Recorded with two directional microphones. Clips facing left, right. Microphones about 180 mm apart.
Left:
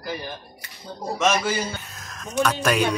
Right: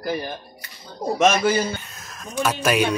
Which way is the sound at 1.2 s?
55° right (ahead or behind).